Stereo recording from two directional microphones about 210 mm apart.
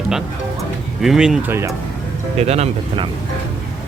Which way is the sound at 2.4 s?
30° right (ahead or behind).